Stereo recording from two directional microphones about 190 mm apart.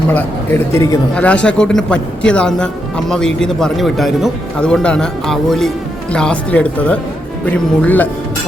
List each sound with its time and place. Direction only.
0.1 s a man's voice: 10° left (ahead or behind)